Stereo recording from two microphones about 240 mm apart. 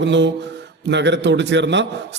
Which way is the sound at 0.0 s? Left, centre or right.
Right.